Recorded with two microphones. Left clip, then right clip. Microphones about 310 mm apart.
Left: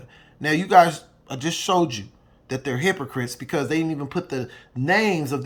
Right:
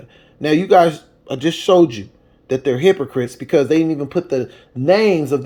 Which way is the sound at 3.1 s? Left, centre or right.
Centre.